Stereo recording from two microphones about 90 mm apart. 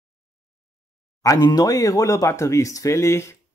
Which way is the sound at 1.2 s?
40° left (ahead or behind).